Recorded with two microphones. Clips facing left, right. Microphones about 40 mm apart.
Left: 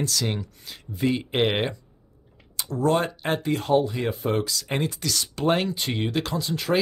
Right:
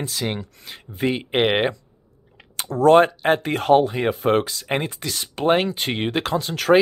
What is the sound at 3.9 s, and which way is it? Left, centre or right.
Speech, right.